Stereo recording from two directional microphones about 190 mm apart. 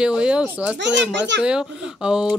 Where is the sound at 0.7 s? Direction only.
70° right (ahead or behind).